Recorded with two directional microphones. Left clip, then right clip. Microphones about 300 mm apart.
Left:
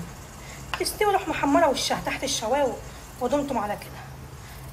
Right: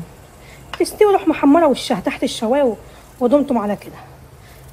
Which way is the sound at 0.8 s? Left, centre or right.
Right.